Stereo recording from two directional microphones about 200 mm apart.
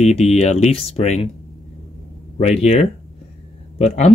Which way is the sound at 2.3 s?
30° left (ahead or behind).